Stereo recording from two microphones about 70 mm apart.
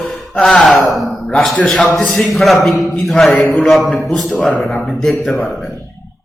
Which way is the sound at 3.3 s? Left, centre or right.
Left.